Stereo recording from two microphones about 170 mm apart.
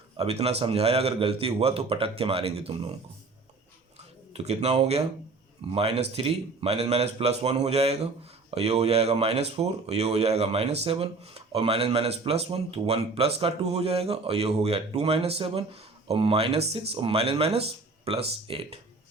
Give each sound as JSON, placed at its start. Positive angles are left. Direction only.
{"t": 0.2, "sound": "speech", "side_deg": -35}
{"t": 4.4, "sound": "speech", "side_deg": -35}